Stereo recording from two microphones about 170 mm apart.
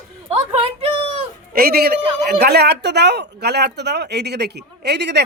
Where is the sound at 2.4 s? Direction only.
75° right (ahead or behind).